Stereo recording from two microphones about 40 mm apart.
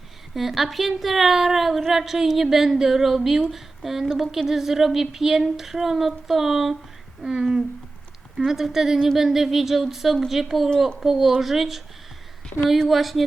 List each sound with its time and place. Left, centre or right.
0.3 s a woman's voice: centre
12.9 s a woman's voice: centre